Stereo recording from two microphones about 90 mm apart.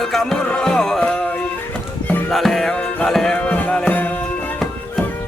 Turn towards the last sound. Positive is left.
turn(degrees=15)  # may be behind; listen again after turning